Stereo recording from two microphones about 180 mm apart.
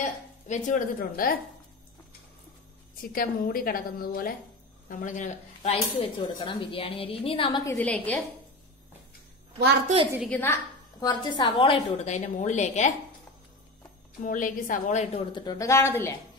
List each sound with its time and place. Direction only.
0.5 s a woman's voice: 45° left (ahead or behind)
3.1 s a woman's voice: 55° left (ahead or behind); by 7.6 s 30° left (ahead or behind)
7.7 s a woman's voice: 5° left (ahead or behind)
10.3 s a woman's voice: 15° left (ahead or behind)
11.1 s speech: 25° left (ahead or behind); by 12.9 s 40° left (ahead or behind)
14.2 s a woman's voice: 50° left (ahead or behind)
15.3 s a woman's voice: 20° left (ahead or behind)